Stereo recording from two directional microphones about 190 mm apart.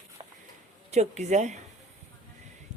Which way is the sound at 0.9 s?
35° right (ahead or behind).